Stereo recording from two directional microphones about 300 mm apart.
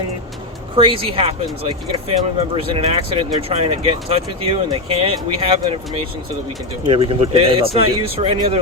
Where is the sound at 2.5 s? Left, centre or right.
Centre.